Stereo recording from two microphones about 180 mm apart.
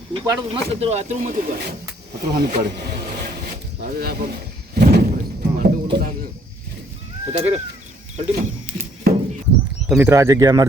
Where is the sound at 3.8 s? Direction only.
55° right (ahead or behind).